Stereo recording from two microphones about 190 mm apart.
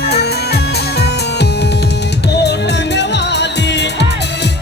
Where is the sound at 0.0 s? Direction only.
60° left (ahead or behind).